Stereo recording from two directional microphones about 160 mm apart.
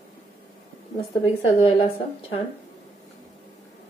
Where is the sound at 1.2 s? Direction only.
35° left (ahead or behind).